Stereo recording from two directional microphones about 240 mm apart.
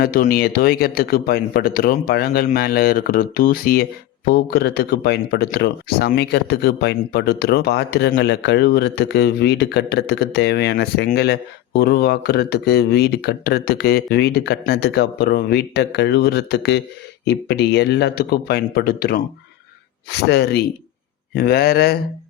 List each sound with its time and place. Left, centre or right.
0.0 s speech: left